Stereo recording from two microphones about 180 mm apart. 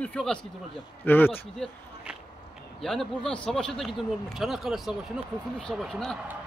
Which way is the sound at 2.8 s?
Centre (ahead or behind).